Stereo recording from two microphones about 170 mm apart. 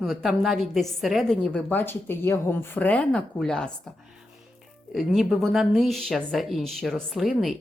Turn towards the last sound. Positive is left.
turn(degrees=0)  # may be behind; listen again after turning